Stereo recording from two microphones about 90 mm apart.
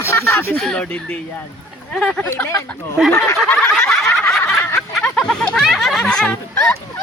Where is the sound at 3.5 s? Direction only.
10° left (ahead or behind).